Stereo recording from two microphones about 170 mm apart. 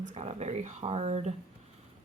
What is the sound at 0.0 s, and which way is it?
Speech, 40° right (ahead or behind).